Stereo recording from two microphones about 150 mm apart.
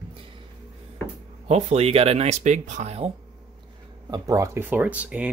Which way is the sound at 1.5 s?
45° right (ahead or behind).